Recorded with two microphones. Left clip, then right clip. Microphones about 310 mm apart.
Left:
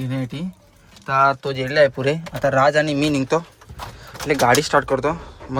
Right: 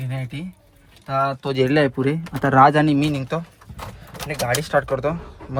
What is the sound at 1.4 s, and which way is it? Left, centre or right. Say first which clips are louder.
Speech: left 2 dB; centre.